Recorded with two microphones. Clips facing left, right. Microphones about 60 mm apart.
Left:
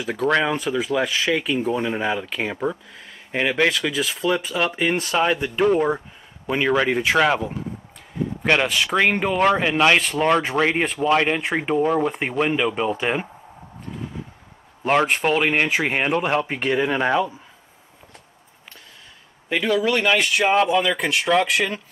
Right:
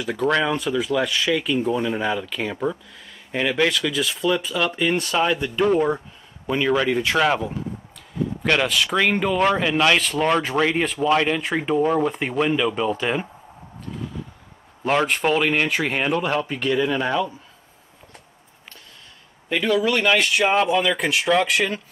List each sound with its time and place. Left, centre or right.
0.0 s speech: centre
8.5 s speech: centre
11.7 s speech: centre
12.1 s speech: left
14.9 s speech: left
19.5 s speech: centre